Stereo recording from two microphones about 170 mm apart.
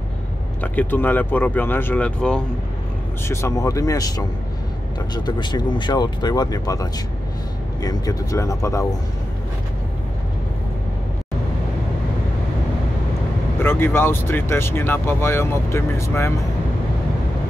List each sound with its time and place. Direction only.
0.6 s speech: 10° left (ahead or behind)
13.6 s speech: 15° left (ahead or behind)